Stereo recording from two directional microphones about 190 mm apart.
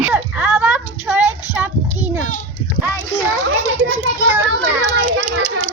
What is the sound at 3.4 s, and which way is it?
Children playing, 90° right.